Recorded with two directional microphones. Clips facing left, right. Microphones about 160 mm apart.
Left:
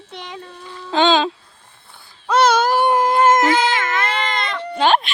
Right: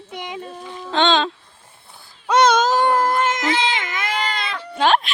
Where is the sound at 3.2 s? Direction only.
50° left (ahead or behind).